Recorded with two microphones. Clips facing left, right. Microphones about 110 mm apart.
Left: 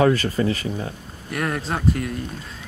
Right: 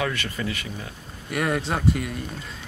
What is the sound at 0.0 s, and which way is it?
Speech, 35° left (ahead or behind).